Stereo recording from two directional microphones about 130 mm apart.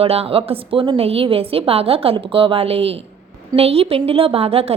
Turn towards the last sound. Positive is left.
turn(degrees=-50)  # may be behind; listen again after turning